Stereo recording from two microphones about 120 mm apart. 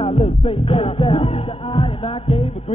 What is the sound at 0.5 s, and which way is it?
Music, 50° left (ahead or behind).